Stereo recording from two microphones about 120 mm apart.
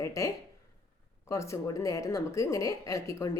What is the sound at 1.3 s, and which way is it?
A woman's voice, 25° left (ahead or behind).